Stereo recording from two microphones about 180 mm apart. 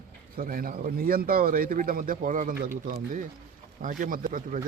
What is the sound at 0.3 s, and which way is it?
Speech, 50° right (ahead or behind).